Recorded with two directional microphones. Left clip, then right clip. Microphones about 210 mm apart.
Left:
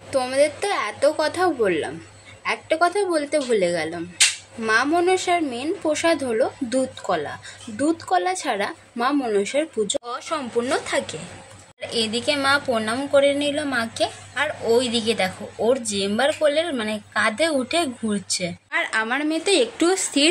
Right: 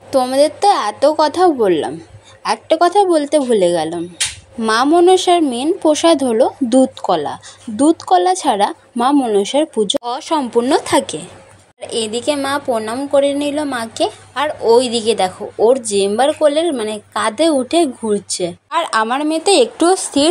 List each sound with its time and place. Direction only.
0.1 s speech: 25° right (ahead or behind)
11.9 s speech: 20° right (ahead or behind)